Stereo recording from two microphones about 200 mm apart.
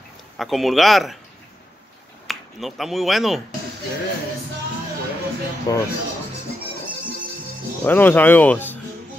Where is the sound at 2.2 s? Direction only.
Centre (ahead or behind).